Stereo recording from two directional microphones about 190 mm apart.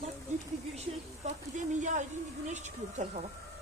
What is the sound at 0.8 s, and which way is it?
Speech, 40° right (ahead or behind).